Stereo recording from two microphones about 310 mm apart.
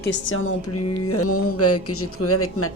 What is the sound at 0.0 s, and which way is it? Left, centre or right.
A woman's voice, left.